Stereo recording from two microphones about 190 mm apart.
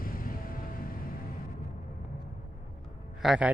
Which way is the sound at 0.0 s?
50° left (ahead or behind).